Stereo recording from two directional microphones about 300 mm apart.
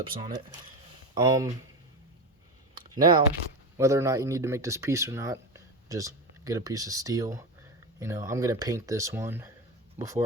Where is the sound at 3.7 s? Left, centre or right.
Centre.